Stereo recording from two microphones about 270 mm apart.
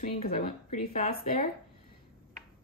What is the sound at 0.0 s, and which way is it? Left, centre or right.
Speech, left.